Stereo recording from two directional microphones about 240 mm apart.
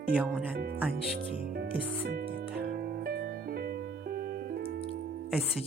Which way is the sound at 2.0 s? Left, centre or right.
Right.